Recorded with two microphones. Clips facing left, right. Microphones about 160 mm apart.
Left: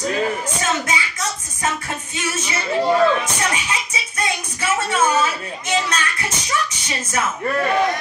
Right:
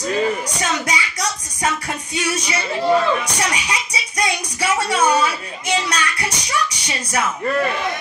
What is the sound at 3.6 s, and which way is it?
Speech, 35° right (ahead or behind).